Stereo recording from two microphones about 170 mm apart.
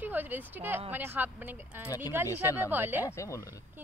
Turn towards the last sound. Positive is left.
turn(degrees=20)  # may be behind; listen again after turning